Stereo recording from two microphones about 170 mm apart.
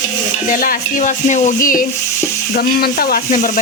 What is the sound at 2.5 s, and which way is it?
Speech, 60° left (ahead or behind).